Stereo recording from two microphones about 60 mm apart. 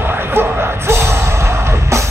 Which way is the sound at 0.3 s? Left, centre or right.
Right.